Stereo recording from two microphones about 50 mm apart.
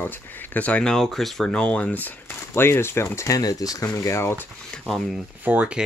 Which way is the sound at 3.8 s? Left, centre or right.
Left.